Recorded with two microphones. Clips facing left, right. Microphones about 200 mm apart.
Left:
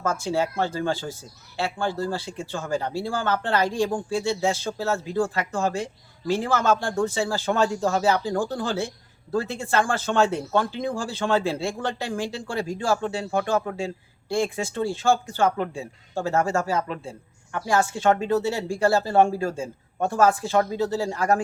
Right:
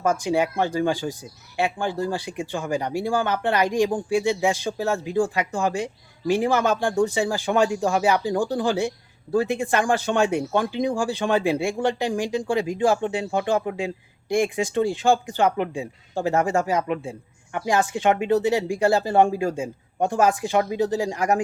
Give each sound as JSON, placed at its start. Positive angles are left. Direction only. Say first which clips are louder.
{"t": 0.0, "sound": "speech", "louder": "right 3 dB", "side_deg": -15}